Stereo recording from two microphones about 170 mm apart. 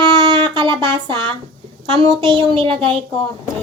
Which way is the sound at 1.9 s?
30° right (ahead or behind).